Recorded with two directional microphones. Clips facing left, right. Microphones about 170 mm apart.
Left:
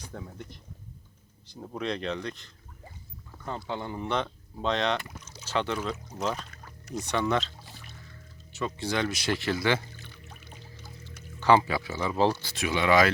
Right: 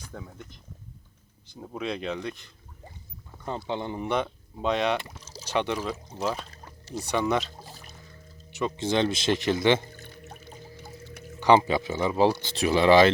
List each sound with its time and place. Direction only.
0.1 s speech: centre (ahead or behind)
4.9 s speech: 30° right (ahead or behind)
5.5 s speech: 15° right (ahead or behind)
6.5 s pour: 30° right (ahead or behind)
7.0 s speech: 10° right (ahead or behind)
7.5 s music: 40° right (ahead or behind)
8.5 s speech: 20° right (ahead or behind)
9.9 s pour: 50° right (ahead or behind)
10.8 s a sound: 55° right (ahead or behind)
11.3 s speech: 20° right (ahead or behind)
12.5 s speech: 35° right (ahead or behind)